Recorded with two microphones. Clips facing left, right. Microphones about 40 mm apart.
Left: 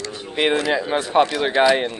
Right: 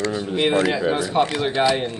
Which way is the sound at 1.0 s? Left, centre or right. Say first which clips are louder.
Left 3 dB; left.